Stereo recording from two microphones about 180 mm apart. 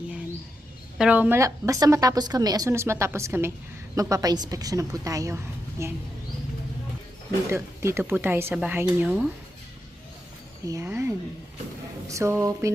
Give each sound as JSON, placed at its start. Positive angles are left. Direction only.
{"t": 0.9, "sound": "a woman's voice", "side_deg": -5}
{"t": 7.5, "sound": "a woman's voice", "side_deg": -15}
{"t": 10.7, "sound": "a woman's voice", "side_deg": -15}